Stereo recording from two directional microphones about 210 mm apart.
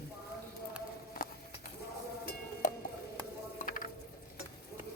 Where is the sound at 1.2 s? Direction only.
40° left (ahead or behind).